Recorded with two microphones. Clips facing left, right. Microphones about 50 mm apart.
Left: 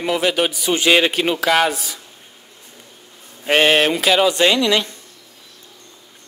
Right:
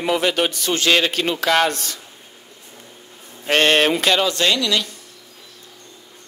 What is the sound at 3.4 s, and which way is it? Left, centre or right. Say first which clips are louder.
Speech: left 1 dB; centre.